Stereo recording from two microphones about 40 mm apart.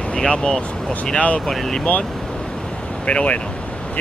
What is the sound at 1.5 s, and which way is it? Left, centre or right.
Speech, centre.